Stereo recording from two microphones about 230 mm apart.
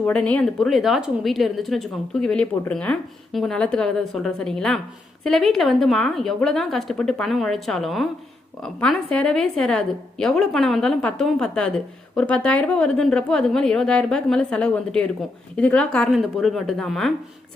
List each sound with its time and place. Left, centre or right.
0.0 s speech: centre